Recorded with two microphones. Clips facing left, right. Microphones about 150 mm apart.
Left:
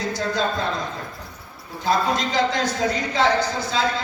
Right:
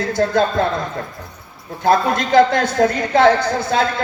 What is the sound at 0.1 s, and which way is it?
Speech, 55° right (ahead or behind).